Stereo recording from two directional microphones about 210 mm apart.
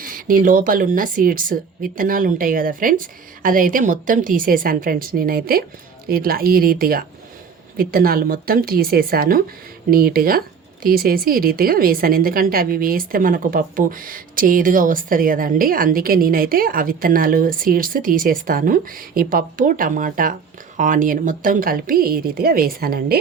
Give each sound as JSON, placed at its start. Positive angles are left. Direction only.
{"t": 0.0, "sound": "a woman's voice", "side_deg": -40}